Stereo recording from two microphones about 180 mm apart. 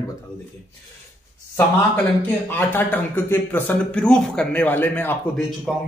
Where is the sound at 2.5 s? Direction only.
10° left (ahead or behind).